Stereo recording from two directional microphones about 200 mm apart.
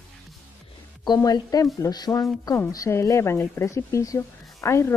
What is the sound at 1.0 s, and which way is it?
Speech, 20° left (ahead or behind).